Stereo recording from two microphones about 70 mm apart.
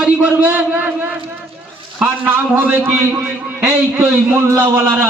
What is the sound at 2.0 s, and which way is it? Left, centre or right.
A man's voice, right.